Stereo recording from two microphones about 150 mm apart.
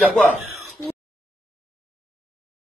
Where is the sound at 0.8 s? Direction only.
15° left (ahead or behind).